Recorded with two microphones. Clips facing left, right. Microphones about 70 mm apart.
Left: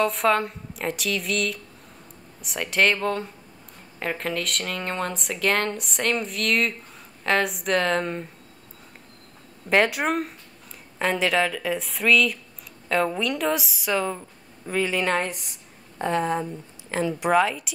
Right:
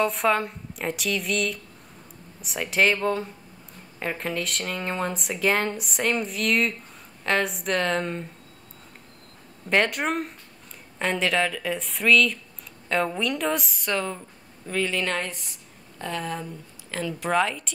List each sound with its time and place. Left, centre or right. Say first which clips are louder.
0.0 s speech: left 1 dB; centre
9.7 s speech: left 2 dB; centre; by 17.3 s left
17.3 s speech: left 2 dB; centre